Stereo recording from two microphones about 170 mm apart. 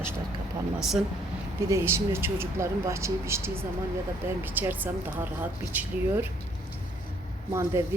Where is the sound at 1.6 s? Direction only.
15° right (ahead or behind).